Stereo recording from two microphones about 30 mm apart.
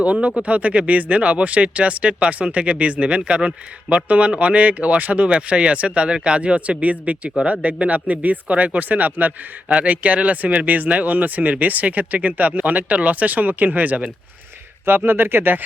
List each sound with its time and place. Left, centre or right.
0.0 s a man's voice: right
8.9 s speech: right
9.6 s a man's voice: right
14.9 s speech: right